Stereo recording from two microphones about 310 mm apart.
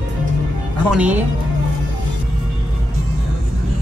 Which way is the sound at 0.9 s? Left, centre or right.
Centre.